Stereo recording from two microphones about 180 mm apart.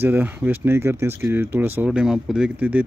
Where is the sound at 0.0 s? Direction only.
10° right (ahead or behind).